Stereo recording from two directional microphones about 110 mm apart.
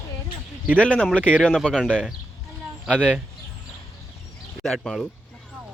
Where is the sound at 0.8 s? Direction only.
10° left (ahead or behind).